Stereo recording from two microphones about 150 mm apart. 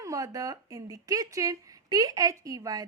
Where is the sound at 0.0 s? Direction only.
20° right (ahead or behind).